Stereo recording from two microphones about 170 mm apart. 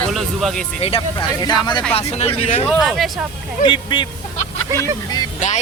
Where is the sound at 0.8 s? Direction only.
30° left (ahead or behind).